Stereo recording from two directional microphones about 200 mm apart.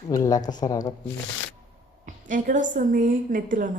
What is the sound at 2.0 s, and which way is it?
A woman's voice, 40° right (ahead or behind).